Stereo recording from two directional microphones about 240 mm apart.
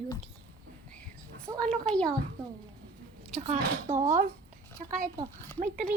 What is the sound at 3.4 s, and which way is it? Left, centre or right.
A woman's voice, right.